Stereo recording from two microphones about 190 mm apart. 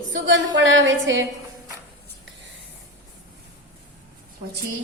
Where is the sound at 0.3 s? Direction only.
80° right.